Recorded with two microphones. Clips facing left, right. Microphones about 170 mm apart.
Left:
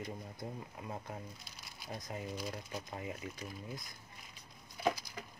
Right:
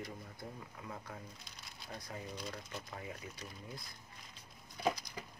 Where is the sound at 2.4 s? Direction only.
Centre (ahead or behind).